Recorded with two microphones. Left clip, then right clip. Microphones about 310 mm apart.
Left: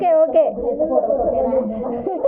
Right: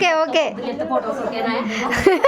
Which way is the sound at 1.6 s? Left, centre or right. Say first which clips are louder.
Right 6 dB; right.